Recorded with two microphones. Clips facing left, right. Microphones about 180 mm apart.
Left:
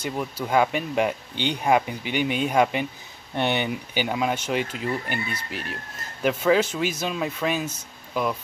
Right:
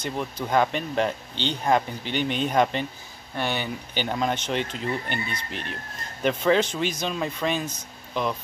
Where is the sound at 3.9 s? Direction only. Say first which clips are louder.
Right 1 dB; 10° left (ahead or behind).